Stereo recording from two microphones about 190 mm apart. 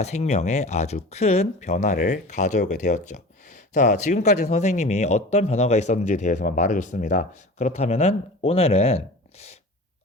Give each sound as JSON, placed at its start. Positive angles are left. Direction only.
{"t": 0.0, "sound": "speech", "side_deg": 35}